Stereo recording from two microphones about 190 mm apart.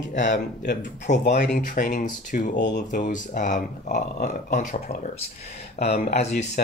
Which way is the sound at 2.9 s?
40° left (ahead or behind).